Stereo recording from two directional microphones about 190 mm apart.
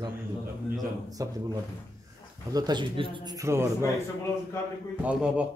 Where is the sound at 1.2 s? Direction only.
20° right (ahead or behind).